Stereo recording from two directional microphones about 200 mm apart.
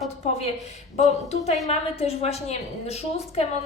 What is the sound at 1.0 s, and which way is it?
A woman's voice, 35° left (ahead or behind).